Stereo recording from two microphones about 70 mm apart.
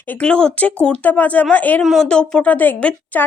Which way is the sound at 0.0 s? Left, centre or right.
Left.